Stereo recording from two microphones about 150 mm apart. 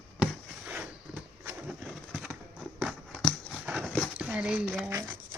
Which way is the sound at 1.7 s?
5° right (ahead or behind).